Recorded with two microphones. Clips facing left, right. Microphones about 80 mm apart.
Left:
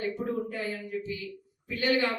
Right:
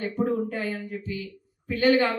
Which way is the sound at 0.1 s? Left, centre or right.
Right.